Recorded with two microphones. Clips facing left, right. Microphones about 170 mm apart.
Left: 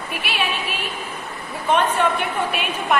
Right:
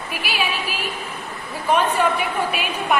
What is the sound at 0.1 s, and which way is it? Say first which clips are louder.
A woman's voice: even; centre (ahead or behind).